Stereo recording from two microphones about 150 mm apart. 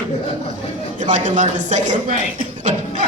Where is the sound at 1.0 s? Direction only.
55° right (ahead or behind).